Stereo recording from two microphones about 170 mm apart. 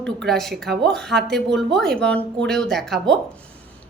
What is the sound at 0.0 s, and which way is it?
Speech, 5° left (ahead or behind).